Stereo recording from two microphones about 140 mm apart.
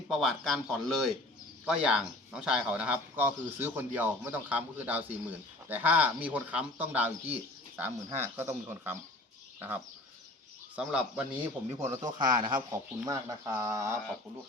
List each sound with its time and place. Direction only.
0.1 s speech: centre (ahead or behind)
10.8 s speech: 10° right (ahead or behind)
12.2 s speech: 75° right (ahead or behind)
12.7 s speech: 25° right (ahead or behind)